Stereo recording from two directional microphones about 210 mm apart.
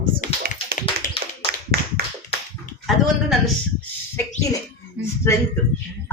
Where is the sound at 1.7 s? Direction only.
50° right (ahead or behind).